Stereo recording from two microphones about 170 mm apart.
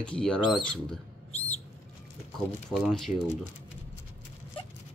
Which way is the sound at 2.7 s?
Centre (ahead or behind).